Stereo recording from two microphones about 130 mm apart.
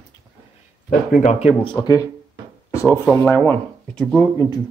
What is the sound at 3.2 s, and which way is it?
Speech, 15° left (ahead or behind).